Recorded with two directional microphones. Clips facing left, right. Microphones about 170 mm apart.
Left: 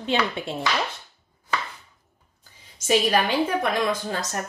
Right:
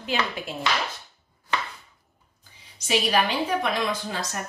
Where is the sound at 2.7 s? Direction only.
45° left (ahead or behind).